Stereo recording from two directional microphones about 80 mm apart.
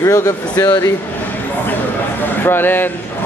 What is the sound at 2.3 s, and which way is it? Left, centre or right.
Speech, left.